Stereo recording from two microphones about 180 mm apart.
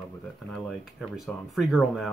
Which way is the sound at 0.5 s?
Centre (ahead or behind).